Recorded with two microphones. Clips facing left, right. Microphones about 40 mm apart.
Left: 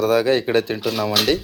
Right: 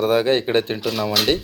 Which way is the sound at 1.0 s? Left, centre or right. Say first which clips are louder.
Left 1 dB; centre.